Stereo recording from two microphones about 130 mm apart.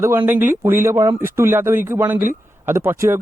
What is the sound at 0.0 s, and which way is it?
Speech, 20° right (ahead or behind).